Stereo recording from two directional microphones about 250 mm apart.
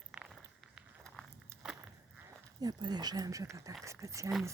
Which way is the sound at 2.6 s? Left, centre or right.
Centre.